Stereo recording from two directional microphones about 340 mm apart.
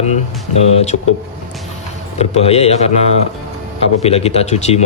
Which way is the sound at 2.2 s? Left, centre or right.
Centre.